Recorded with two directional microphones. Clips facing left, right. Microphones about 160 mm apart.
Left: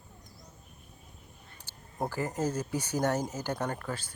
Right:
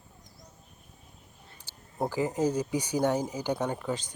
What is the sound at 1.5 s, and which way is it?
Speech, 10° right (ahead or behind).